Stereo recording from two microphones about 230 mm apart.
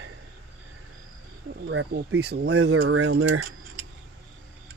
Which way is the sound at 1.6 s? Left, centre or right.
Right.